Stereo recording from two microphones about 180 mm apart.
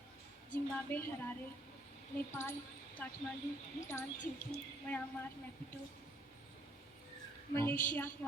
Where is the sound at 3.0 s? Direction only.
10° left (ahead or behind).